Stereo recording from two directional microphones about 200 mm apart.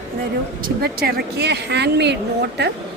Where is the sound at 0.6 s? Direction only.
50° right (ahead or behind).